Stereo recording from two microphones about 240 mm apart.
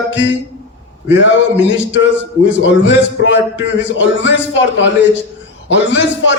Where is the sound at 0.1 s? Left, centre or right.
Left.